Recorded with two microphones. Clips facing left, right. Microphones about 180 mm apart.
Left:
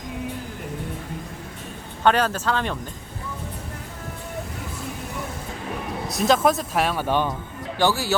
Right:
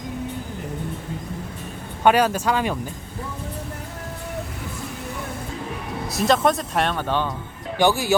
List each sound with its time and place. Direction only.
2.0 s speech: 10° right (ahead or behind)
6.1 s speech: centre (ahead or behind)
7.8 s speech: 15° right (ahead or behind)